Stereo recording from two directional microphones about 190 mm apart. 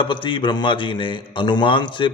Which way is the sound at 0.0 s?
25° left (ahead or behind).